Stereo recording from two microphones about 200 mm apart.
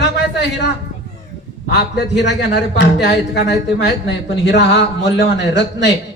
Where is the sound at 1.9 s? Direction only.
60° left (ahead or behind).